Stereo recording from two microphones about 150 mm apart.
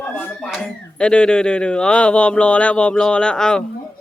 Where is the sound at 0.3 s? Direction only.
Centre (ahead or behind).